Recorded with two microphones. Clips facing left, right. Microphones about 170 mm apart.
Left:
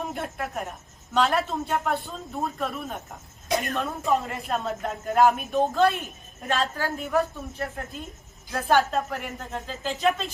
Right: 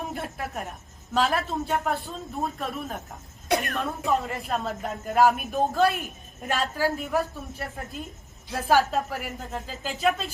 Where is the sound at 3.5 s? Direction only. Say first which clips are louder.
Right 1 dB; 65° right (ahead or behind).